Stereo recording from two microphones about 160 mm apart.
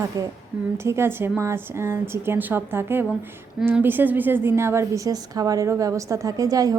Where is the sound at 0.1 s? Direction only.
20° right (ahead or behind).